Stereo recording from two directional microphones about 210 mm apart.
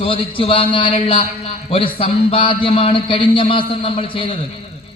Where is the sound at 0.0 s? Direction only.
25° left (ahead or behind).